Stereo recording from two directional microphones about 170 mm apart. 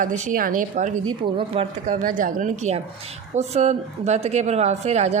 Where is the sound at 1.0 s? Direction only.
35° right (ahead or behind).